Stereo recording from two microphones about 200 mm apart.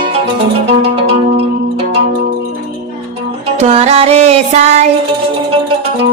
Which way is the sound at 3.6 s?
30° right (ahead or behind).